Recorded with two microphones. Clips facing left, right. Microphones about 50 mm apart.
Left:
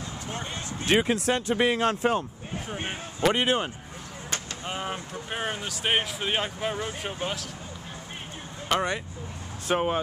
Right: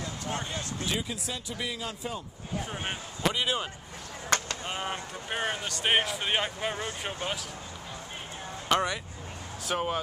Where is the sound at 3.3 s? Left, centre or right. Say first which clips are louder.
Left 5 dB; left.